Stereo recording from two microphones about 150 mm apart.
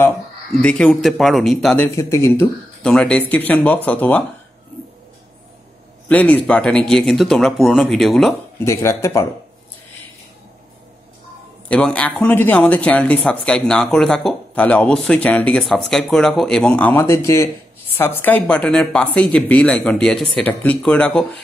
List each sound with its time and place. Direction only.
0.6 s speech: 5° left (ahead or behind)
2.0 s speech: 20° left (ahead or behind)
2.8 s speech: 5° left (ahead or behind)
6.0 s speech: 10° left (ahead or behind)
8.6 s speech: 20° left (ahead or behind)
11.7 s speech: 10° left (ahead or behind)